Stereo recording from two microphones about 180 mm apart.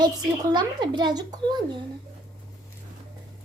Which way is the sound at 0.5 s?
25° right (ahead or behind).